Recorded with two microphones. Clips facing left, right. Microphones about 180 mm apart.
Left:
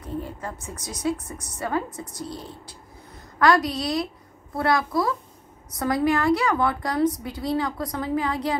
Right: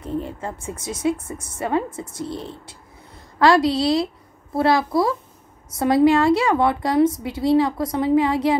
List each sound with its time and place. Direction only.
0.0 s a woman's voice: 25° right (ahead or behind)